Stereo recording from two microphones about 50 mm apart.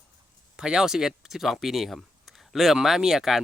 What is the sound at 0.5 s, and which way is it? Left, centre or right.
Speech, centre.